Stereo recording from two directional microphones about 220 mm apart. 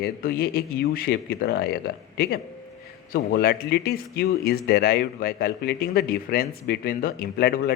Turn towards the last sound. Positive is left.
turn(degrees=45)  # may be behind; listen again after turning